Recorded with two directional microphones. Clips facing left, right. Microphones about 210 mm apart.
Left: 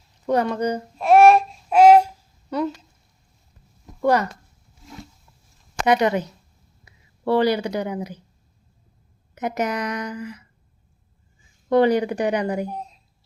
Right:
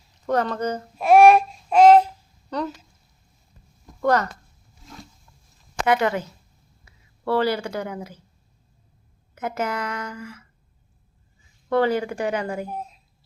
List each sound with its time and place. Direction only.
0.3 s speech: 10° left (ahead or behind)
0.9 s babbling: centre (ahead or behind)
4.0 s speech: 15° left (ahead or behind)
5.8 s speech: 20° left (ahead or behind)
9.3 s speech: 20° left (ahead or behind)
11.7 s speech: 15° left (ahead or behind)
12.6 s speech: 5° right (ahead or behind)